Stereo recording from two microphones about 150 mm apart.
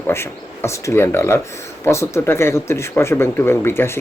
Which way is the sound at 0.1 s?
15° left (ahead or behind).